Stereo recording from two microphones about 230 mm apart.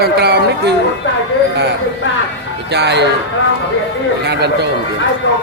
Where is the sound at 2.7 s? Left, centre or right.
Right.